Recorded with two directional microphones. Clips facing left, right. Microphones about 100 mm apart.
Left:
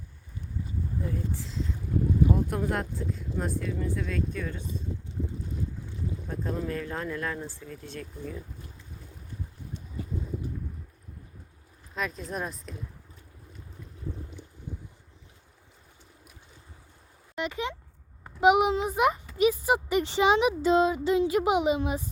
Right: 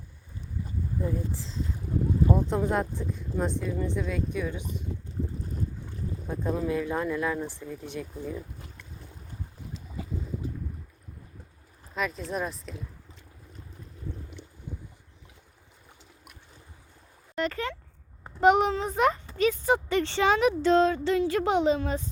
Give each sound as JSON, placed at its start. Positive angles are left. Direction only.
{"t": 1.0, "sound": "speech", "side_deg": -20}
{"t": 6.2, "sound": "speech", "side_deg": -15}
{"t": 11.9, "sound": "speech", "side_deg": 0}
{"t": 17.3, "sound": "speech", "side_deg": 5}